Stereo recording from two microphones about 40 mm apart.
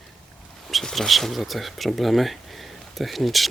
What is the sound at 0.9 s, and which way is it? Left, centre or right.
Speech, centre.